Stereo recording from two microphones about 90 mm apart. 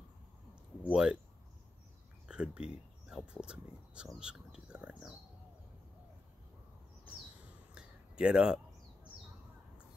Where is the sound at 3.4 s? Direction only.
10° right (ahead or behind).